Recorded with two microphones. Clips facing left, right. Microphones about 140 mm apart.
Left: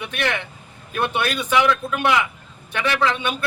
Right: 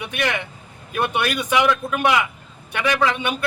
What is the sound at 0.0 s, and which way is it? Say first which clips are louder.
A man's voice: right 1 dB; 15° right (ahead or behind).